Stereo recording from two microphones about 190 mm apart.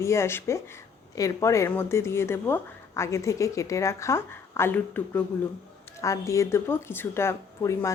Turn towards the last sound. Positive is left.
turn(degrees=15)  # may be behind; listen again after turning